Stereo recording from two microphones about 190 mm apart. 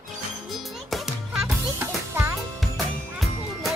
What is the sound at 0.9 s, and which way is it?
Music, centre (ahead or behind).